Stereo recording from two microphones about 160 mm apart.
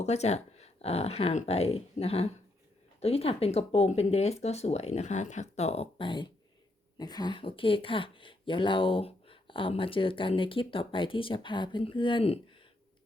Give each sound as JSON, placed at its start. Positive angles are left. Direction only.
{"t": 0.0, "sound": "speech", "side_deg": 45}